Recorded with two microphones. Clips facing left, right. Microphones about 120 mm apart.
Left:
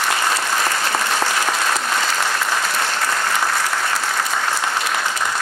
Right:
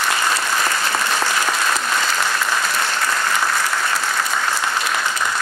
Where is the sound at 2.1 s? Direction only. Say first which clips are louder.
Even; 60° left (ahead or behind).